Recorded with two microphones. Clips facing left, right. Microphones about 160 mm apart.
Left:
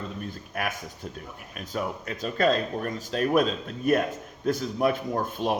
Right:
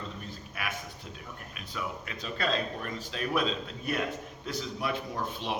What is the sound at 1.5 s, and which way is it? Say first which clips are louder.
A man's voice: left 7 dB; 45° left (ahead or behind).